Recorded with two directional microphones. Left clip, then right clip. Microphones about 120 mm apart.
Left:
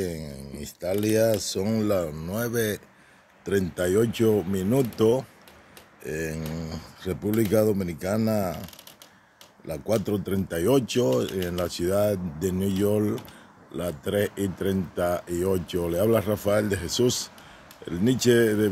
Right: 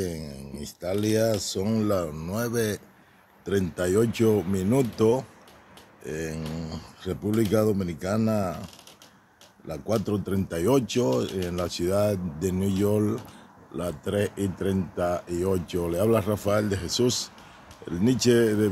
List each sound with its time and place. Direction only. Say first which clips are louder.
0.0 s speech: left 1 dB; 20° left (ahead or behind)
9.7 s speech: left 2 dB; 25° left (ahead or behind)